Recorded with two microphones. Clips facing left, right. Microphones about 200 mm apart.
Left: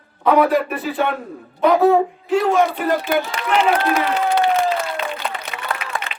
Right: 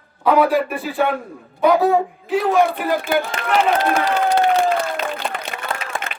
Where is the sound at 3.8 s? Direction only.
40° right (ahead or behind).